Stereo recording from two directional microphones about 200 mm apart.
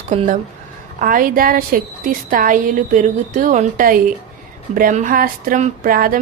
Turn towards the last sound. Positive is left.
turn(degrees=-45)  # may be behind; listen again after turning